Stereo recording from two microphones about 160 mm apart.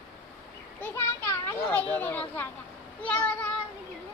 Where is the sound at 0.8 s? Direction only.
15° left (ahead or behind).